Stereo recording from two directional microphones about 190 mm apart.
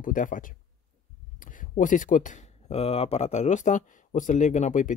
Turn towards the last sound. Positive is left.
turn(degrees=40)  # may be behind; listen again after turning